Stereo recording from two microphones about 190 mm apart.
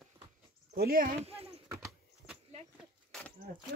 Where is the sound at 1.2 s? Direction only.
30° right (ahead or behind).